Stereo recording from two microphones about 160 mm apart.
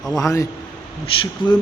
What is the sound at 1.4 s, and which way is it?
Speech, 30° left (ahead or behind).